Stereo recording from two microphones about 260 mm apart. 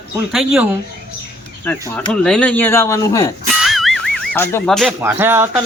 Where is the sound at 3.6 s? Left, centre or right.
Centre.